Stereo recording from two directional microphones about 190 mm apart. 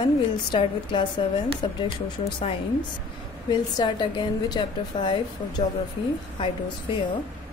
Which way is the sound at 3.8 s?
25° left (ahead or behind).